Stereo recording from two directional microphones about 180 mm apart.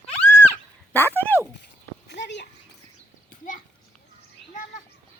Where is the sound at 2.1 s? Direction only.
75° left (ahead or behind).